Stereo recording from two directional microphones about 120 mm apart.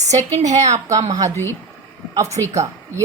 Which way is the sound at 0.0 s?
70° right (ahead or behind).